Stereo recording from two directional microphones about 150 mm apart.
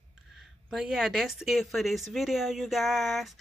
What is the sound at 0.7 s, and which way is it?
Speech, 5° right (ahead or behind).